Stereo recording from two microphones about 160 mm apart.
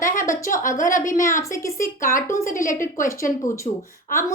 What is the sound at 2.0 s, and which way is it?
A woman's voice, 60° left (ahead or behind).